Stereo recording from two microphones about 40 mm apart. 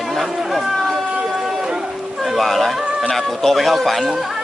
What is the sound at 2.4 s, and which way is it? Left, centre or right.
Speech, centre.